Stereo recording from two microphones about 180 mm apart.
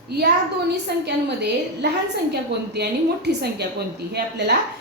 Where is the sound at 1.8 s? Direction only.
70° right (ahead or behind).